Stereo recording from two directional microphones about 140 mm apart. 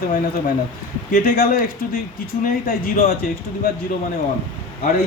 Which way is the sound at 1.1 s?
90° left.